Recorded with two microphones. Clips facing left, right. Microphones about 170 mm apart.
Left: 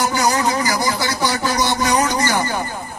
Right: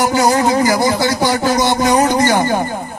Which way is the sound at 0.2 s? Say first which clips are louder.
Right 7 dB; 50° right (ahead or behind).